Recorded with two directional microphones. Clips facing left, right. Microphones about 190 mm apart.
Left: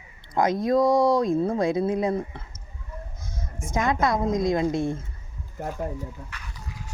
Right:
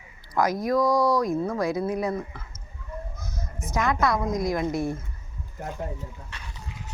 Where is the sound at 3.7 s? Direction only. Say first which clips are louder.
Left 1 dB; 20° left (ahead or behind).